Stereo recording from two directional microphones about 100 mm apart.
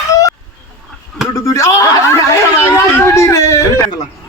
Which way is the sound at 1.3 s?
35° left (ahead or behind).